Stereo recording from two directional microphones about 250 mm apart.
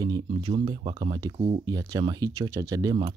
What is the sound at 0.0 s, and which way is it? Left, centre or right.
Speech, centre.